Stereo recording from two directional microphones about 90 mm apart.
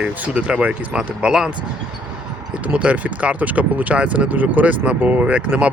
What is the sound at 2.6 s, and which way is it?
Speech, 15° right (ahead or behind).